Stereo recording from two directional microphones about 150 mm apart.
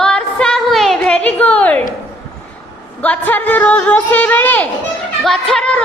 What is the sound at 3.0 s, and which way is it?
A woman's voice, 10° left (ahead or behind).